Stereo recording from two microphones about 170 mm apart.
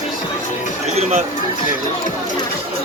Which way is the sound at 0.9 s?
40° right (ahead or behind).